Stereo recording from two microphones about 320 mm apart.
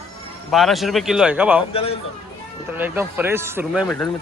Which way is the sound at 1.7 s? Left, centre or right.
Centre.